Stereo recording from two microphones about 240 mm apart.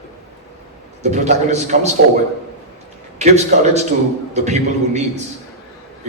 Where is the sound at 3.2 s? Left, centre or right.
Right.